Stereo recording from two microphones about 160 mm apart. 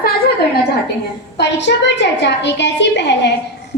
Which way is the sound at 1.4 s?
90° left.